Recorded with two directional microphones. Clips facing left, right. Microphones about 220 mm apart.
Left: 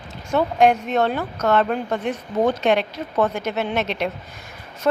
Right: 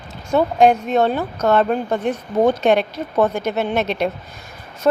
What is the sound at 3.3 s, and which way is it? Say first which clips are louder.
Speech: right 3 dB; 50° right (ahead or behind).